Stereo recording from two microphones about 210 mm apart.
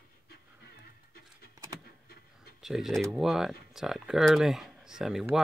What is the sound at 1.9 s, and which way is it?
Vehicle, 45° left (ahead or behind).